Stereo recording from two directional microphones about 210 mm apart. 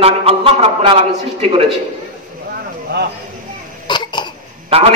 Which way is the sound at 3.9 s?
20° left (ahead or behind).